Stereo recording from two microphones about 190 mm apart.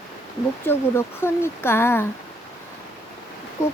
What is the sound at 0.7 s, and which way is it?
Speech, 15° left (ahead or behind).